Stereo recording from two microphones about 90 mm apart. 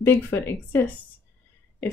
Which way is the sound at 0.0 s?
25° left (ahead or behind).